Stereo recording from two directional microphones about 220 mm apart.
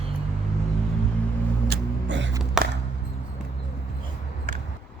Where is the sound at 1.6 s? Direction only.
50° right (ahead or behind).